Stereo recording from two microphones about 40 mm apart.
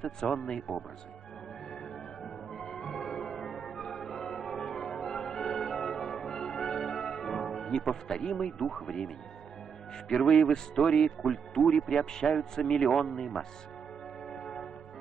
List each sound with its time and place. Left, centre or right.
0.0 s speech: centre
2.2 s music: centre
3.4 s change ringing: centre
7.9 s speech: centre
10.1 s speech: centre
10.4 s speech: centre
12.0 s speech: centre
14.3 s church bell: centre